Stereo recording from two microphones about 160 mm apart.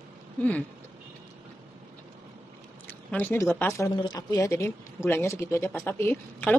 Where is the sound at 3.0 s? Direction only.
10° left (ahead or behind).